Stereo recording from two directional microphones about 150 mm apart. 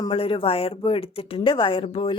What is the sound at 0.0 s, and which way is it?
A woman's voice, 35° left (ahead or behind).